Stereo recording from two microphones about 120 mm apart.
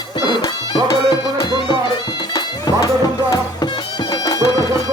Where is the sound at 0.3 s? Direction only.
35° left (ahead or behind).